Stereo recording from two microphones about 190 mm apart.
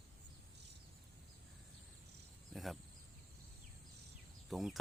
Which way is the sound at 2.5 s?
Centre (ahead or behind).